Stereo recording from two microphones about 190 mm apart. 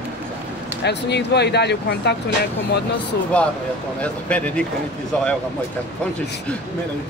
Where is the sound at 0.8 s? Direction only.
65° left (ahead or behind).